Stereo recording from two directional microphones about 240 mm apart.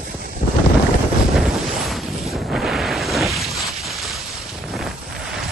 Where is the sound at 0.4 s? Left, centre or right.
Left.